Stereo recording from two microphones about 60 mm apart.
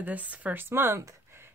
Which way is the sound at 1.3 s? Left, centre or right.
Right.